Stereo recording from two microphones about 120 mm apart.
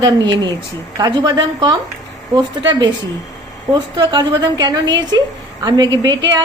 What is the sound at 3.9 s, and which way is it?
A woman's voice, 40° right (ahead or behind).